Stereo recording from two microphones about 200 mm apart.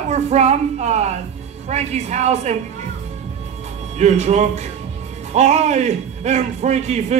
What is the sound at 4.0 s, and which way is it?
A man's voice, 35° right (ahead or behind).